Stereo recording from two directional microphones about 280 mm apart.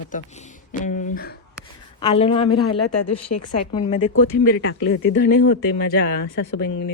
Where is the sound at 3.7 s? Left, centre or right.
Centre.